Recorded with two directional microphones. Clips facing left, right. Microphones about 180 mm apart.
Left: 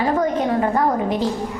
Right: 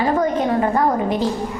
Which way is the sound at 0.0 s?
20° right (ahead or behind).